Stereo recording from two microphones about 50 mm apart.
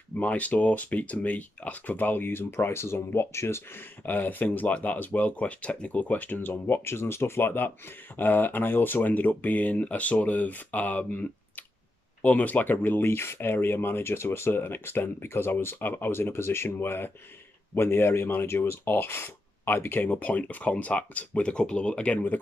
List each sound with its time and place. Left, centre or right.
0.2 s speech: left
4.0 s speech: left